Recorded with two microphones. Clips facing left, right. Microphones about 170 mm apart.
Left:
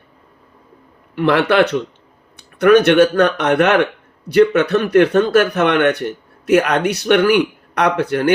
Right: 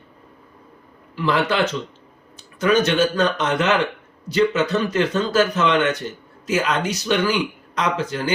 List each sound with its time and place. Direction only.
1.1 s speech: 65° left (ahead or behind)